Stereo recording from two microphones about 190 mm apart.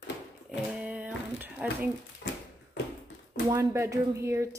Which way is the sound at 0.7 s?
5° right (ahead or behind).